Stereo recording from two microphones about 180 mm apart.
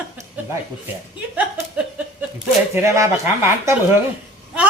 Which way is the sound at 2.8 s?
15° right (ahead or behind).